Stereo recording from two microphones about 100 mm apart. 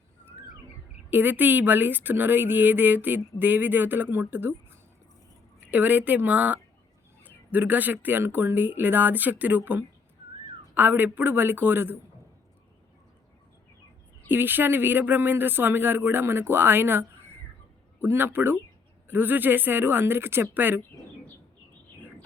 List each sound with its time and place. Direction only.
1.1 s speech: 20° right (ahead or behind)
14.3 s speech: 20° right (ahead or behind)